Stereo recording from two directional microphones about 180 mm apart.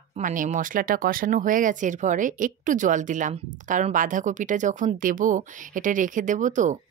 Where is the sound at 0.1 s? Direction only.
45° right (ahead or behind).